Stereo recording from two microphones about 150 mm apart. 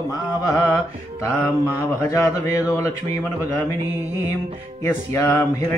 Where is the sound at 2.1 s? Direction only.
20° left (ahead or behind).